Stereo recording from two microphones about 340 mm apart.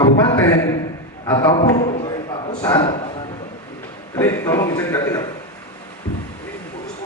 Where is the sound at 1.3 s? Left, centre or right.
Centre.